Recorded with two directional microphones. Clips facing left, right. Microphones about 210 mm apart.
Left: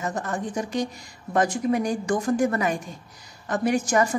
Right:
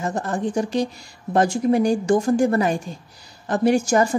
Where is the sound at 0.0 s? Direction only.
30° right (ahead or behind).